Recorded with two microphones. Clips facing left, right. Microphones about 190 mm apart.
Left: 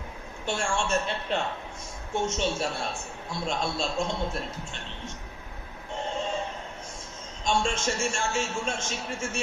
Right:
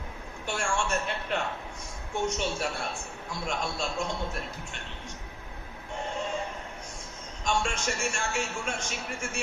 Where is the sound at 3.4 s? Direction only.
30° left (ahead or behind).